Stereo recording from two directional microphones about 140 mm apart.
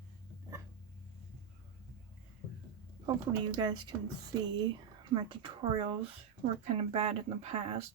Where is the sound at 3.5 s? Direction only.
30° right (ahead or behind).